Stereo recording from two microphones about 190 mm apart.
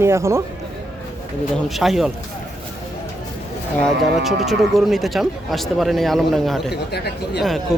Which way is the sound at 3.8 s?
Centre (ahead or behind).